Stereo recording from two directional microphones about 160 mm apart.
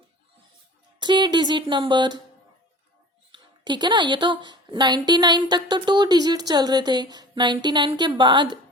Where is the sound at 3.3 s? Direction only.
30° right (ahead or behind).